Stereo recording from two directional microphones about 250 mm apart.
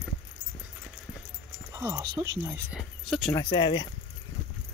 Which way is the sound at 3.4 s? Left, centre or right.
Centre.